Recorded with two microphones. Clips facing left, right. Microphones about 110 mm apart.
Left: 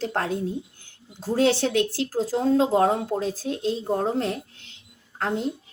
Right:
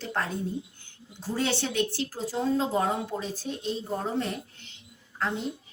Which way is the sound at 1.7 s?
90° left.